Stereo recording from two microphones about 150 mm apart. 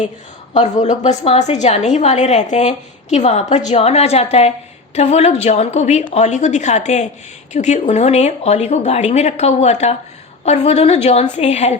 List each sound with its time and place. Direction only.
0.5 s a woman's voice: 50° left (ahead or behind)